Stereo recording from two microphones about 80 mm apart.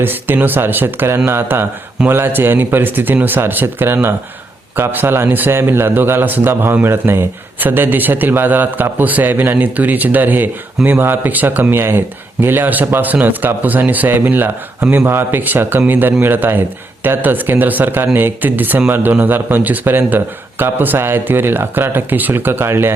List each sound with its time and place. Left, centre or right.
0.0 s speech: right